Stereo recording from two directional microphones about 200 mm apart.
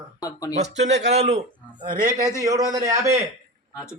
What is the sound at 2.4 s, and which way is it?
Speech, 15° right (ahead or behind).